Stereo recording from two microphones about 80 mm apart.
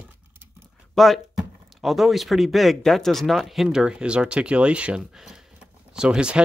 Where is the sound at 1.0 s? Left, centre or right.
Centre.